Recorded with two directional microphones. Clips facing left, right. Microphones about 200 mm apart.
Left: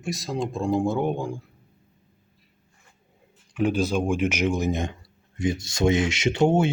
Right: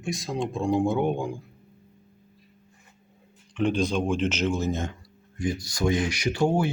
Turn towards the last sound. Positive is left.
turn(degrees=25)  # may be behind; listen again after turning